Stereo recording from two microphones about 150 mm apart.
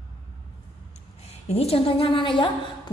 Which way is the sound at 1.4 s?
45° left (ahead or behind).